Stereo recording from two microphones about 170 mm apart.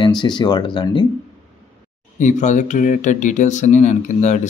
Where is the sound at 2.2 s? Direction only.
45° left (ahead or behind).